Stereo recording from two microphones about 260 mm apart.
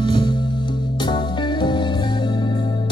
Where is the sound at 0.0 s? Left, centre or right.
Centre.